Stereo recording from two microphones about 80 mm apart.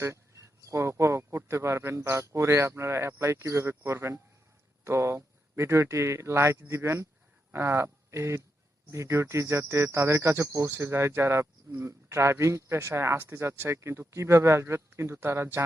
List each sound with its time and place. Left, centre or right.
0.0 s speech: right